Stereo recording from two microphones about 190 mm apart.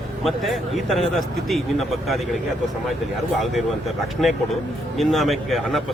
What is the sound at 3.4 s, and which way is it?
Speech, centre (ahead or behind).